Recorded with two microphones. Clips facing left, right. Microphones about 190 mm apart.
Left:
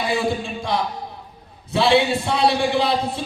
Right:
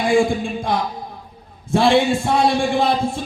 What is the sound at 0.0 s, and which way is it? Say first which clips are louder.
Speech: right 5 dB; 50° right (ahead or behind).